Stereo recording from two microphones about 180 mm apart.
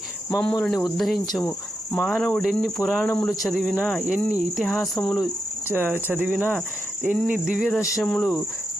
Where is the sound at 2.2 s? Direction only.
Centre (ahead or behind).